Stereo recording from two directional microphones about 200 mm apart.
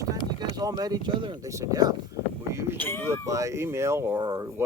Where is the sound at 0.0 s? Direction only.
20° right (ahead or behind).